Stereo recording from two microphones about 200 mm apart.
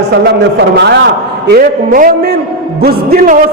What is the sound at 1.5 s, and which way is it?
A man's voice, 45° right (ahead or behind).